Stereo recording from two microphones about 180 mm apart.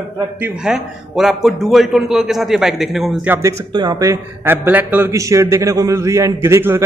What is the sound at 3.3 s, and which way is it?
A man's voice, 15° right (ahead or behind).